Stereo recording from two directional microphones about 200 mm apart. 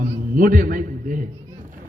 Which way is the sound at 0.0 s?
45° right (ahead or behind).